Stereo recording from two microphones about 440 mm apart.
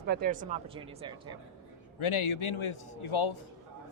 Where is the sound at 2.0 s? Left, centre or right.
Left.